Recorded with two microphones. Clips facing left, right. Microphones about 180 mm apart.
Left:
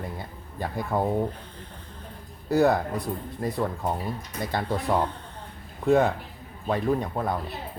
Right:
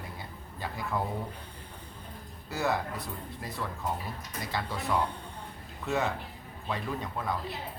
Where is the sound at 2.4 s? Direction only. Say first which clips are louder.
Left 10 dB; 60° left (ahead or behind).